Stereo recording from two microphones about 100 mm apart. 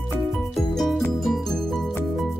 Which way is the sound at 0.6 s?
Centre (ahead or behind).